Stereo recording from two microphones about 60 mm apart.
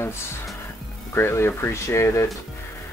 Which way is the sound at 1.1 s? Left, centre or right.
Left.